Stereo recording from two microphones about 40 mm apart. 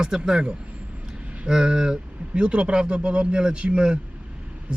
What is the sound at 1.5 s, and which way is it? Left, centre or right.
Speech, centre.